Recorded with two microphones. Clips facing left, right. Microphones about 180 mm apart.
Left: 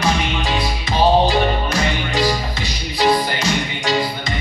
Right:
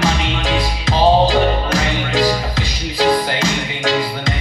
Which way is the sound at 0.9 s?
90° right.